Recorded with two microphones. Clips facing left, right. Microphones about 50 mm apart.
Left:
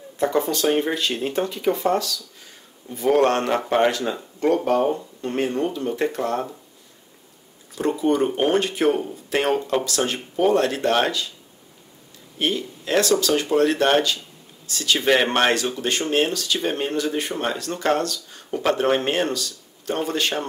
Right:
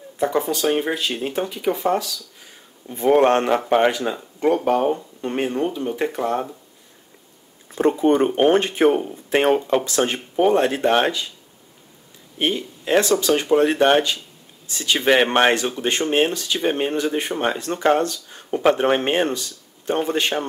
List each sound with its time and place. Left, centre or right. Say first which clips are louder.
0.2 s speech: even; centre
7.7 s speech: right 4 dB; right
12.4 s speech: right 1 dB; right